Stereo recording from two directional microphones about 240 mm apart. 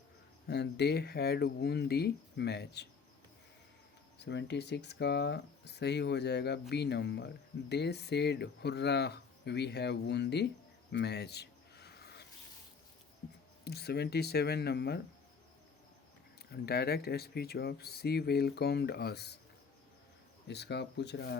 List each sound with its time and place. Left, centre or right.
0.4 s speech: left
4.2 s speech: left
10.9 s a sound: left
13.7 s speech: left
16.5 s speech: left
20.5 s speech: left